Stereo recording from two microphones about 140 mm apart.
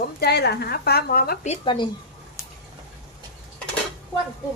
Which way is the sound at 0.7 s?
90° left.